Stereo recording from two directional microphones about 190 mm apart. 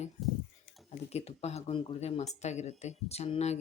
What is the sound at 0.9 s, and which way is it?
Speech, 35° left (ahead or behind).